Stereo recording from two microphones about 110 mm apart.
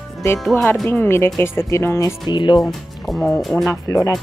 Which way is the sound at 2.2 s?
45° left (ahead or behind).